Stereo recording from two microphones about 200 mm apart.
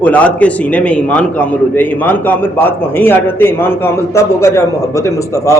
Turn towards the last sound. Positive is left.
turn(degrees=15)  # may be behind; listen again after turning